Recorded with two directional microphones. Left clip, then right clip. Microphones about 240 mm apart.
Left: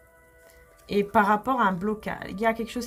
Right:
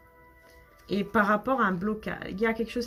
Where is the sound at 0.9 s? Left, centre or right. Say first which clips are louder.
Left 4 dB; left.